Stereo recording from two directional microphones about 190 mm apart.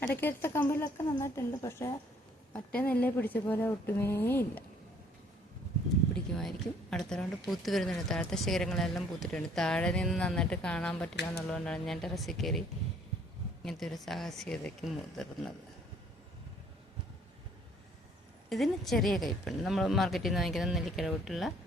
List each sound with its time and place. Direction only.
0.1 s a woman's voice: 10° left (ahead or behind)
6.9 s speech: 5° left (ahead or behind)
13.7 s speech: centre (ahead or behind)
18.4 s speech: centre (ahead or behind)